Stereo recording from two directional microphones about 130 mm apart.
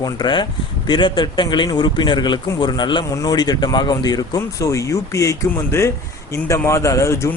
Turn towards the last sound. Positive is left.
turn(degrees=20)  # may be behind; listen again after turning